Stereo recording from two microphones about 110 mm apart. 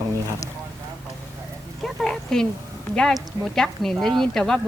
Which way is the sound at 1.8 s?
5° left (ahead or behind).